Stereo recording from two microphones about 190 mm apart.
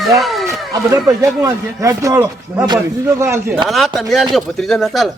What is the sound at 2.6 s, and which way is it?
Speech, 25° right (ahead or behind).